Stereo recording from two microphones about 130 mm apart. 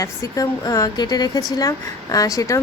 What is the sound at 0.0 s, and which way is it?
Speech, 25° left (ahead or behind).